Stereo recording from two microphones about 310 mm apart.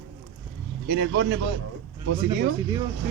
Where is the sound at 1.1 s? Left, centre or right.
Right.